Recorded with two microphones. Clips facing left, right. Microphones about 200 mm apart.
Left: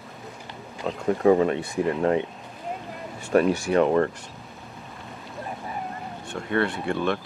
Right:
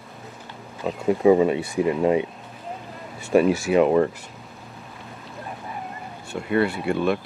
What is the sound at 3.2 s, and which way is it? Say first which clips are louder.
Speech: right 2 dB; 5° right (ahead or behind).